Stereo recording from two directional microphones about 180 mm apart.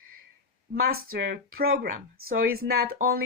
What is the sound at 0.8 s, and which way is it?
Speech, 60° right (ahead or behind).